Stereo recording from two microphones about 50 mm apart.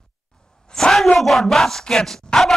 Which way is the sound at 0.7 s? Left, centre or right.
Centre.